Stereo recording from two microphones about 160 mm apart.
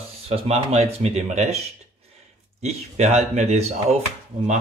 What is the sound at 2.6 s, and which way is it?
Speech, 45° right (ahead or behind).